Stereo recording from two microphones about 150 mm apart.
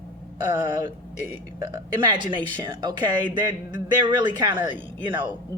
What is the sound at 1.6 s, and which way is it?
A woman's voice, 25° right (ahead or behind).